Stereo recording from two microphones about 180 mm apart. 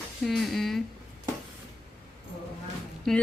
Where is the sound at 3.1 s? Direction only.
Centre (ahead or behind).